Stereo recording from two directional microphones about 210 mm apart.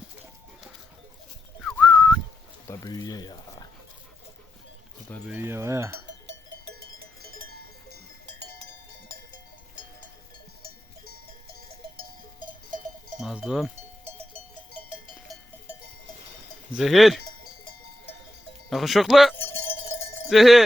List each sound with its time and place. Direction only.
1.6 s whistling: centre (ahead or behind)
2.6 s a sound: 15° left (ahead or behind)
5.3 s a sound: 10° right (ahead or behind)
6.1 s cowbell: 60° right (ahead or behind)
6.9 s cowbell: 45° right (ahead or behind)
13.1 s cowbell: 5° right (ahead or behind)
16.7 s speech: centre (ahead or behind)
18.7 s speech: centre (ahead or behind)
19.4 s a sound: 10° left (ahead or behind)
20.3 s speech: centre (ahead or behind)